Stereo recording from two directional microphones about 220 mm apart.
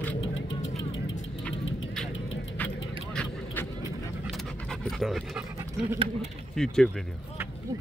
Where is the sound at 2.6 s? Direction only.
10° left (ahead or behind).